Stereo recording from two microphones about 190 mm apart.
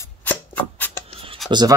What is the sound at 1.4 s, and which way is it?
Speech, 25° right (ahead or behind).